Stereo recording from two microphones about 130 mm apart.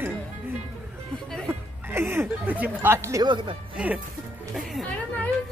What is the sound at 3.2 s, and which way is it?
Speech, 40° right (ahead or behind).